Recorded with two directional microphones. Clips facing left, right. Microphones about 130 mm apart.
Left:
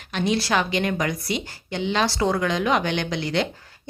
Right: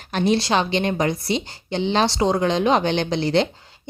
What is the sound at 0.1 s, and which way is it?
Speech, 40° right (ahead or behind).